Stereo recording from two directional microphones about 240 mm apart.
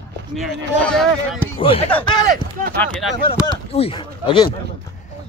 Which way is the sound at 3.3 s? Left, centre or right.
Left.